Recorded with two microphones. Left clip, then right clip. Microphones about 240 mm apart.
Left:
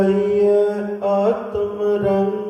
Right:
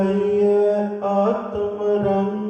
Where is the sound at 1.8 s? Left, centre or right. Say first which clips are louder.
Left 2 dB; left.